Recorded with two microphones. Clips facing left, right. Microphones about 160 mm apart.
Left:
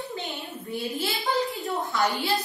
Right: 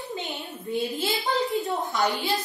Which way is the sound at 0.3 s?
20° right (ahead or behind).